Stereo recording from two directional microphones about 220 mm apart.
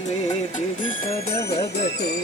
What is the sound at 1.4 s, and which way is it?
Music, 50° left (ahead or behind).